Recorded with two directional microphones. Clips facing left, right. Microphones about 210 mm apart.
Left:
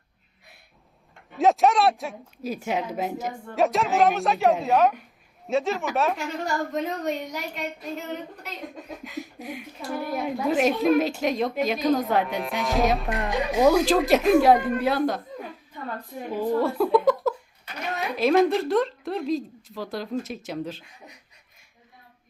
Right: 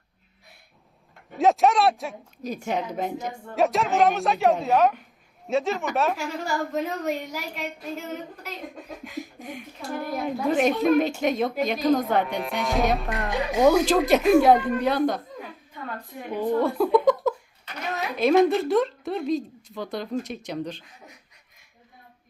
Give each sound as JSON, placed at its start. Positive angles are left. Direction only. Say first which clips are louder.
{"t": 1.4, "sound": "a woman's voice", "louder": "even", "side_deg": 0}
{"t": 16.3, "sound": "a woman's voice", "louder": "right 1 dB", "side_deg": 0}